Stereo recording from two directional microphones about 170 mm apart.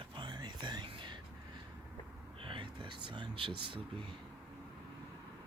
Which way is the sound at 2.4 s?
30° right (ahead or behind).